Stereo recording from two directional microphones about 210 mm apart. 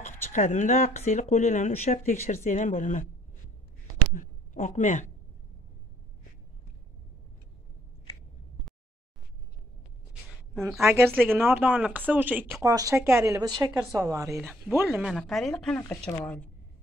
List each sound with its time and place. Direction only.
0.0 s speech: 35° left (ahead or behind)
4.1 s speech: 40° left (ahead or behind)
10.8 s speech: 10° right (ahead or behind); by 16.2 s 10° left (ahead or behind)